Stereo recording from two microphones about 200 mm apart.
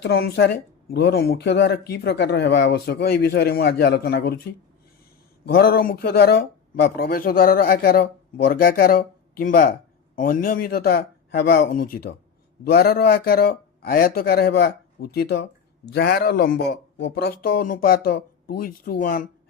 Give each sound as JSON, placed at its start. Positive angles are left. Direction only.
{"t": 0.0, "sound": "speech", "side_deg": 55}
{"t": 5.5, "sound": "speech", "side_deg": 50}